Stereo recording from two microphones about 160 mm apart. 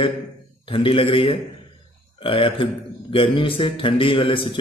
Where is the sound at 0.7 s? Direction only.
35° left (ahead or behind).